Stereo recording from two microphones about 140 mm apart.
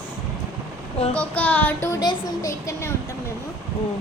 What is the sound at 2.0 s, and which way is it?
Speech, 25° left (ahead or behind).